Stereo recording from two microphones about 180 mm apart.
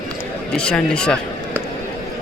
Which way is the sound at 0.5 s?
5° left (ahead or behind).